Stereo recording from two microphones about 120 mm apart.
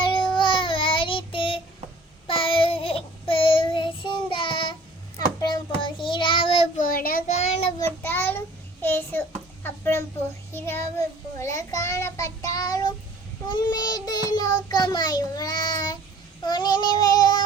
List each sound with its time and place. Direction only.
0.0 s child singing: 45° left (ahead or behind)
7.3 s child singing: 65° left (ahead or behind)
7.8 s child singing: 20° left (ahead or behind)
9.6 s a sound: 20° left (ahead or behind)
10.5 s child singing: 20° left (ahead or behind)